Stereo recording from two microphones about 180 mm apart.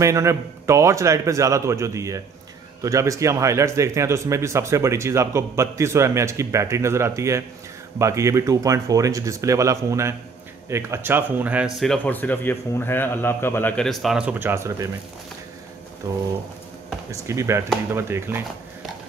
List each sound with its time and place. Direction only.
0.0 s speech: 15° right (ahead or behind)
16.0 s pigeon: 20° right (ahead or behind)
17.1 s speech: 15° right (ahead or behind)